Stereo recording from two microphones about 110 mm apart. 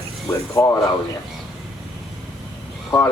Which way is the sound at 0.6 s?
35° left (ahead or behind).